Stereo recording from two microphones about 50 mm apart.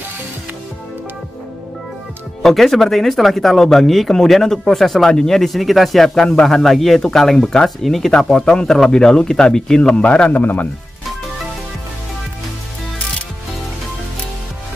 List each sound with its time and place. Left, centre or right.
2.4 s a man's voice: centre; by 10.3 s left
10.3 s speech: left